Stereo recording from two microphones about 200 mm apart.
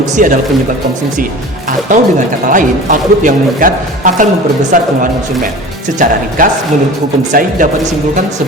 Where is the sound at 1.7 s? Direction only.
40° right (ahead or behind).